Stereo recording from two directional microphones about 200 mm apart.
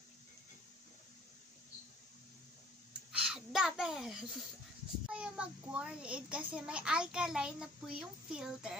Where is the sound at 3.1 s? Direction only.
5° right (ahead or behind).